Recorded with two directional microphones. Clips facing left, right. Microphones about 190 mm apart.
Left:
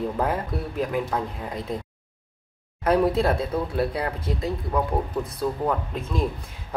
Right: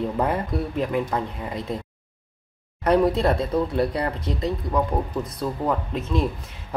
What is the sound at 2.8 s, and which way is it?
A woman's voice, 5° left (ahead or behind).